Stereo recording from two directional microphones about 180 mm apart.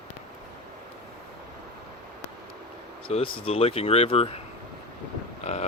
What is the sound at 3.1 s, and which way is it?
Speech, 30° left (ahead or behind).